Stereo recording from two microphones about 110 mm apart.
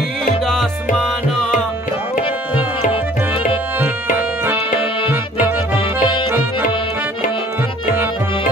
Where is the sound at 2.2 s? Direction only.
55° left (ahead or behind).